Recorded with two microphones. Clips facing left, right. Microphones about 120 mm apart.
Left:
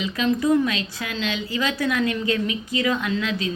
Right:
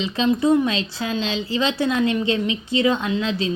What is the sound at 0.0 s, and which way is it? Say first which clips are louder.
A woman's voice: right 3 dB; 25° right (ahead or behind).